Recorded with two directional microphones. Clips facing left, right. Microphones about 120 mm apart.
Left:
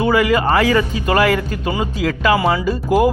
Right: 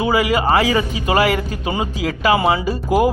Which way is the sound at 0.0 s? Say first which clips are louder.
Left 2 dB; 10° right (ahead or behind).